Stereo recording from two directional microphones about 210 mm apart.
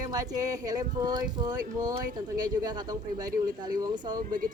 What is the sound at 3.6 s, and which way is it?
Music, 20° right (ahead or behind).